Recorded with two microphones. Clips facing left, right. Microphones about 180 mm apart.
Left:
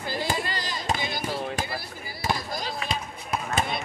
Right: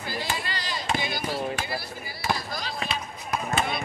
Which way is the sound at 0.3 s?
45° left (ahead or behind).